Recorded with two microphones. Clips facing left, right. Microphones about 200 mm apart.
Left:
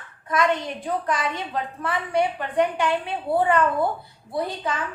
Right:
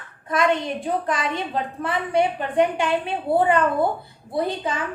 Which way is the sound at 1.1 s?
25° right (ahead or behind).